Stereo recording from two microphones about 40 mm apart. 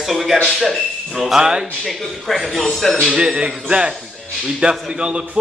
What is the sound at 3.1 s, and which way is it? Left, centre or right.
Speech, centre.